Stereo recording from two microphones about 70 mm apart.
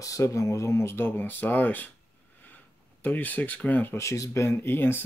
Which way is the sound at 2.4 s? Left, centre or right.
Left.